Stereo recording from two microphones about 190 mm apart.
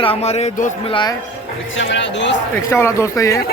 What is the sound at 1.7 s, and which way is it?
Speech, 70° left (ahead or behind).